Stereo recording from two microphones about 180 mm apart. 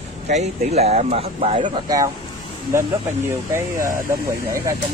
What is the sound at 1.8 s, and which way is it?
Speech, 20° right (ahead or behind).